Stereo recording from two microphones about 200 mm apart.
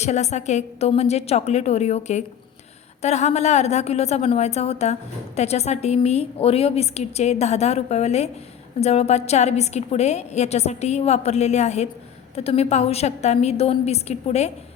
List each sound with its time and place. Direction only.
0.0 s a woman's voice: 35° left (ahead or behind)